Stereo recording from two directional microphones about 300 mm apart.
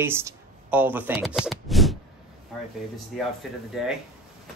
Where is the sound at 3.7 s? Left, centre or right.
Centre.